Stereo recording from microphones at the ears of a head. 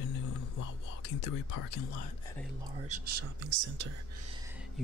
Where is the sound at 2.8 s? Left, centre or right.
Right.